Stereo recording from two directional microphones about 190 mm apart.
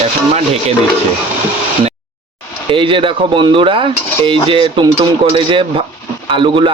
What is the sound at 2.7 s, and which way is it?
Speech, 25° right (ahead or behind).